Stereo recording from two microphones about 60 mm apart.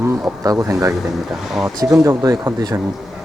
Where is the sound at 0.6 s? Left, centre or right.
Right.